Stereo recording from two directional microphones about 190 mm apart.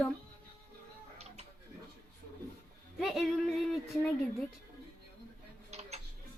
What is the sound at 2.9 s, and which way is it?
Music, centre (ahead or behind).